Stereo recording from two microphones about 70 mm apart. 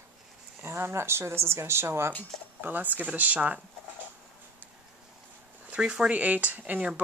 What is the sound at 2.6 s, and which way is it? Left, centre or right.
Speech, right.